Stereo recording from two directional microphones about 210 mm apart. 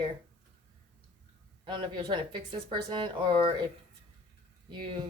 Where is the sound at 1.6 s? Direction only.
25° right (ahead or behind).